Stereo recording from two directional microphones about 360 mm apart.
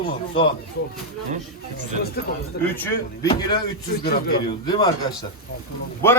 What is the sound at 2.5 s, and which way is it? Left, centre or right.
Speech, left.